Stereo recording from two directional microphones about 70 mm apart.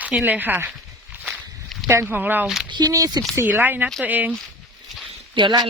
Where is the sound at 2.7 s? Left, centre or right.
Right.